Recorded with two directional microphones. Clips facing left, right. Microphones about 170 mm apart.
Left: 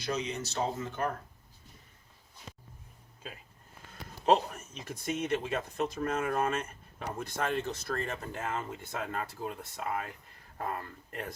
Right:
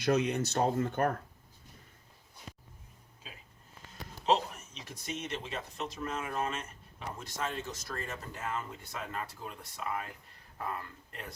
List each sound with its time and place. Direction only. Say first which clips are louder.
0.0 s speech: right 6 dB; 60° right (ahead or behind)
4.3 s speech: left 3 dB; 50° left (ahead or behind)